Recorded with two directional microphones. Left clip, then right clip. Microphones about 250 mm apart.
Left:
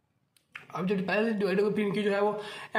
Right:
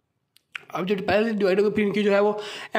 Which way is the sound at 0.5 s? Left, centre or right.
Right.